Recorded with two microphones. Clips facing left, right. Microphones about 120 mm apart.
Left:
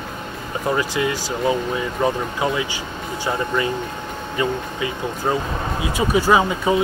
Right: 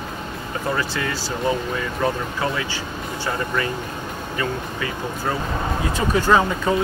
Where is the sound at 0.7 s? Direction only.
15° left (ahead or behind).